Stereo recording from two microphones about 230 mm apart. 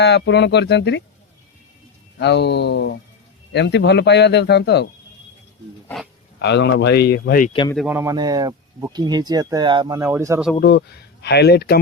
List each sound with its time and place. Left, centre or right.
0.0 s speech: left
2.1 s speech: left
6.4 s speech: left
7.9 s speech: centre
10.6 s speech: left